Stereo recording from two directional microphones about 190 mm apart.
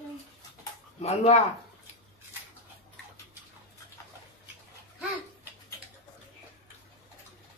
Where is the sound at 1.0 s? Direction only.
35° left (ahead or behind).